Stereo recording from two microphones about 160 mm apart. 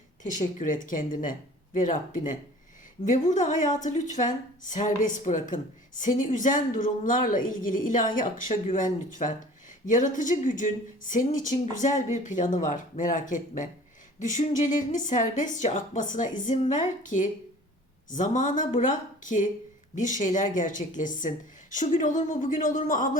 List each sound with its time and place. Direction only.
0.6 s speech: 55° left (ahead or behind)